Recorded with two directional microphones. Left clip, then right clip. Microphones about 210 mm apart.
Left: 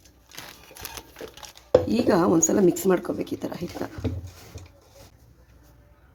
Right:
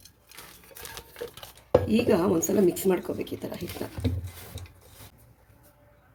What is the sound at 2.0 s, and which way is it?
A woman's voice, 15° left (ahead or behind).